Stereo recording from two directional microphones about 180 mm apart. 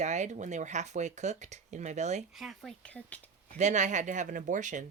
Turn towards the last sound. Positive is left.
turn(degrees=-45)  # may be behind; listen again after turning